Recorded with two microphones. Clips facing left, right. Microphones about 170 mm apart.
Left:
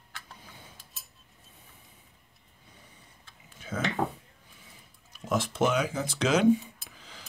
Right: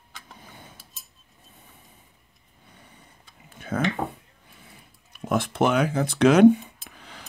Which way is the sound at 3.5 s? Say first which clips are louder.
Right 7 dB; 60° right (ahead or behind).